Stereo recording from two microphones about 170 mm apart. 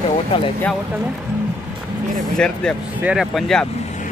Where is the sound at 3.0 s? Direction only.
5° right (ahead or behind).